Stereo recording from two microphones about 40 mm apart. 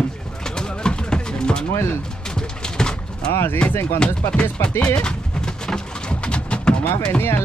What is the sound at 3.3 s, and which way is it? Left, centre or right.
Speech, left.